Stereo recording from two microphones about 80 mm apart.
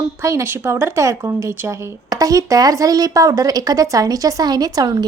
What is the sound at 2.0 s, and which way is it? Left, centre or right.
A woman's voice, right.